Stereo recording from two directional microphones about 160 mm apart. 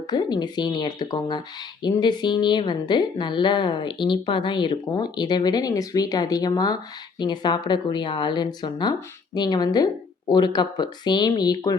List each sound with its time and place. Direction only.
0.1 s a woman's voice: 25° left (ahead or behind)